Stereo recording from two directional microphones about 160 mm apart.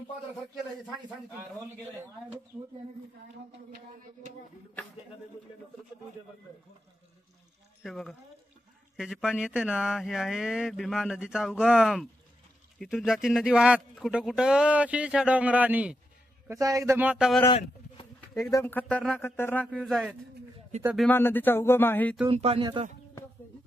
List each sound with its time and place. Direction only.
7.8 s speech: centre (ahead or behind)
16.4 s speech: 20° right (ahead or behind)
17.5 s a sound: 35° left (ahead or behind)
18.3 s speech: 20° left (ahead or behind); by 20.2 s 5° left (ahead or behind)
20.7 s a man's voice: 45° right (ahead or behind)
21.1 s speech: 10° left (ahead or behind)
22.3 s speech: 40° right (ahead or behind)